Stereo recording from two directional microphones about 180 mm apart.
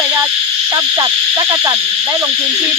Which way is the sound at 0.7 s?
20° right (ahead or behind).